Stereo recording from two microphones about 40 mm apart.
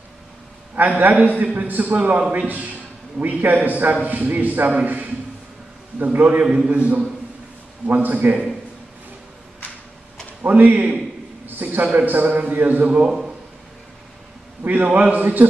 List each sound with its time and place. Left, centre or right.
0.7 s a man's voice: right
3.9 s a man's voice: right
6.4 s a man's voice: centre
6.7 s a man's voice: right
7.8 s a man's voice: right
10.4 s a man's voice: right
11.4 s a sound: right
11.8 s a man's voice: right
14.6 s a man's voice: right